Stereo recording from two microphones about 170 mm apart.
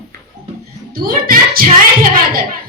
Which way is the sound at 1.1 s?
60° right (ahead or behind).